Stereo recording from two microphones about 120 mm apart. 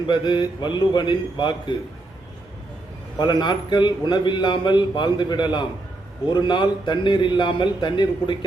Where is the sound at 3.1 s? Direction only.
40° left (ahead or behind).